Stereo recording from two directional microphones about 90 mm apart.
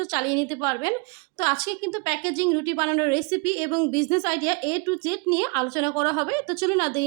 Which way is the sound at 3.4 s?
90° left.